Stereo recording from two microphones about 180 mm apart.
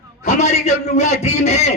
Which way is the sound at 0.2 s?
40° left (ahead or behind).